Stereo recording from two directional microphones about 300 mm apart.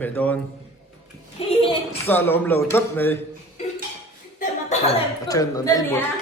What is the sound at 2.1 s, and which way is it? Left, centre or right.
Speech, centre.